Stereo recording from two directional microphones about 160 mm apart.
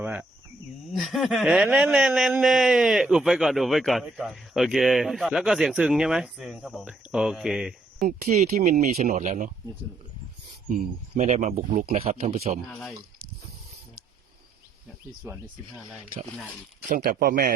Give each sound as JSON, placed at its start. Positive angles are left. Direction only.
{"t": 0.0, "sound": "cricket", "side_deg": -10}
{"t": 0.9, "sound": "a man's voice", "side_deg": 0}
{"t": 8.0, "sound": "speech", "side_deg": -50}
{"t": 10.7, "sound": "speech", "side_deg": -50}
{"t": 11.9, "sound": "speech", "side_deg": -35}
{"t": 15.2, "sound": "speech", "side_deg": -15}
{"t": 16.9, "sound": "speech", "side_deg": -70}